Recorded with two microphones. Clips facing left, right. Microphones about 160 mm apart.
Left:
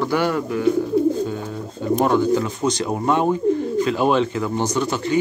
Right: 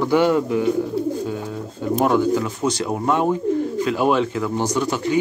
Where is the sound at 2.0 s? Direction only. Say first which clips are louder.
Even; 5° right (ahead or behind).